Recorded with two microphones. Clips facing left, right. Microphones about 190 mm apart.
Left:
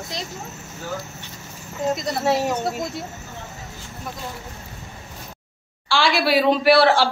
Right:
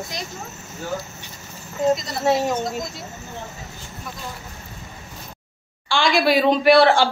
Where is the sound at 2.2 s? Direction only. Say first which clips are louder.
Right 2 dB; 5° left (ahead or behind).